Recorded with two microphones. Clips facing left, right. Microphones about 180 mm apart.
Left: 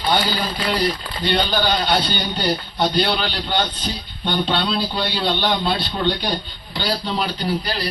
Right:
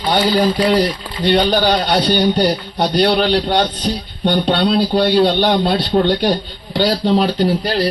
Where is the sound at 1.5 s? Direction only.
50° right (ahead or behind); by 6.3 s 70° right (ahead or behind).